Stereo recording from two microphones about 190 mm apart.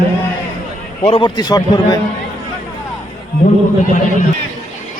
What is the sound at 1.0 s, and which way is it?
Speech, 25° left (ahead or behind).